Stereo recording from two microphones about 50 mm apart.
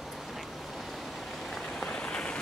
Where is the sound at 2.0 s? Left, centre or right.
Left.